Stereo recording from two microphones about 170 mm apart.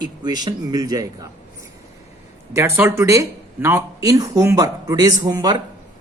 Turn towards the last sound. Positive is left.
turn(degrees=-20)  # may be behind; listen again after turning